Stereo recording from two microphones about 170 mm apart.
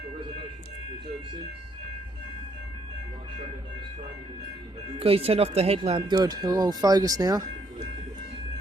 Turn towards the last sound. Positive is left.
turn(degrees=-20)  # may be behind; listen again after turning